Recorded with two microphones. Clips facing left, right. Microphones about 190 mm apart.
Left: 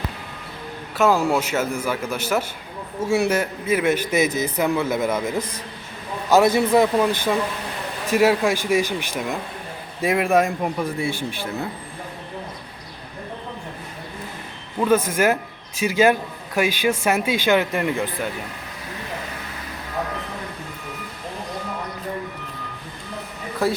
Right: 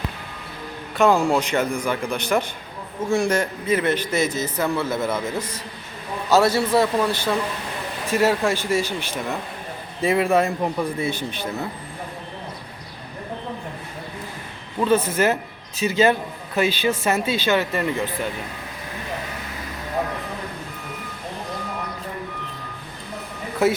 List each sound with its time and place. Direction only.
0.9 s a man's voice: 5° left (ahead or behind)
14.8 s a man's voice: 10° left (ahead or behind)